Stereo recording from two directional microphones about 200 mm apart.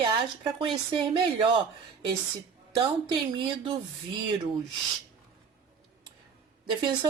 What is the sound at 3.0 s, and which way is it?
Speech, 25° right (ahead or behind).